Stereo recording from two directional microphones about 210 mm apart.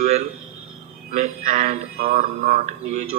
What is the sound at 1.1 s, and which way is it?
Speech, 40° right (ahead or behind).